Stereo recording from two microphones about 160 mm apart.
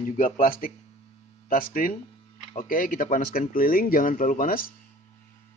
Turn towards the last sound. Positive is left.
turn(degrees=60)  # may be behind; listen again after turning